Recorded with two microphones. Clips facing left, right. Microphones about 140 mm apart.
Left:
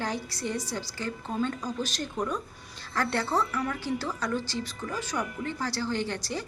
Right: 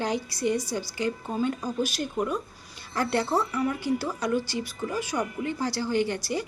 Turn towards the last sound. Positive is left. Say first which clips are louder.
# right 5 dB
turn(degrees=-10)  # may be behind; listen again after turning